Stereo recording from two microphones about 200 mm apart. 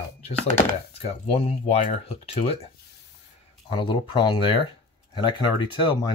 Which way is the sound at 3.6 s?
25° left (ahead or behind).